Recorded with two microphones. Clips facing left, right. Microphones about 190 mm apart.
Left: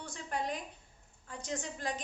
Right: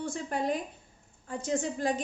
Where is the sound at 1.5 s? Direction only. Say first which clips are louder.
Right 9 dB; 30° right (ahead or behind).